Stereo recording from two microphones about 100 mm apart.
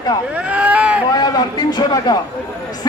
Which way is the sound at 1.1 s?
40° left (ahead or behind).